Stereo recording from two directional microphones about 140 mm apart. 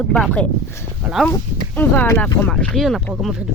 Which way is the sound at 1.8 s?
15° left (ahead or behind).